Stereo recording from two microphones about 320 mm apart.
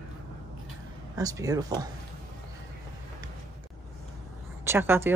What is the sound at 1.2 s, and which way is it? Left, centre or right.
Speech, centre.